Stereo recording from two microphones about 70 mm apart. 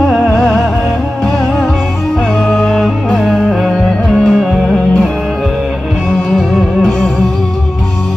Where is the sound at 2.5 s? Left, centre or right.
Centre.